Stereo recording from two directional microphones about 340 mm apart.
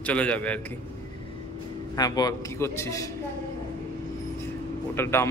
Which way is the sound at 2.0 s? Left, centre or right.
Centre.